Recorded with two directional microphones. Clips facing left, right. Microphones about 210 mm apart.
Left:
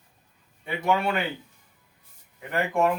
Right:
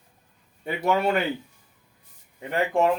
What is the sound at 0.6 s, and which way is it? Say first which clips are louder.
Speech: right 2 dB; 40° right (ahead or behind).